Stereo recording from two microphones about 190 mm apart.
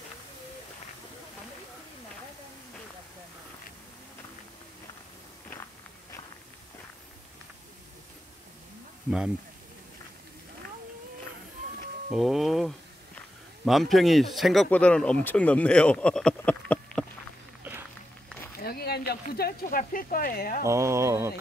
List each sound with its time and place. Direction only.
12.1 s a sound: centre (ahead or behind)
13.7 s speech: centre (ahead or behind)
18.6 s speech: 55° left (ahead or behind)
20.6 s speech: 15° right (ahead or behind)